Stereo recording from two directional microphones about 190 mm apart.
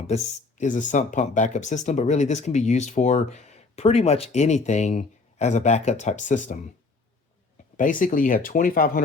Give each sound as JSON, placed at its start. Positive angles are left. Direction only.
{"t": 0.1, "sound": "speech", "side_deg": 35}
{"t": 7.8, "sound": "speech", "side_deg": 45}